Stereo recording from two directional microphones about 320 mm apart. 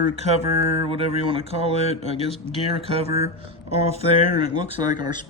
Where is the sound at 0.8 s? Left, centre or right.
Centre.